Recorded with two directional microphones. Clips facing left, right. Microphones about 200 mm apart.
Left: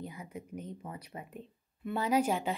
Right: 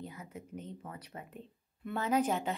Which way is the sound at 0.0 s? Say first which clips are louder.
Left 2 dB; 10° left (ahead or behind).